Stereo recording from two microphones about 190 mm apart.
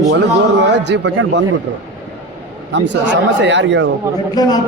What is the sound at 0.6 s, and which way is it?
Speech, 65° right (ahead or behind).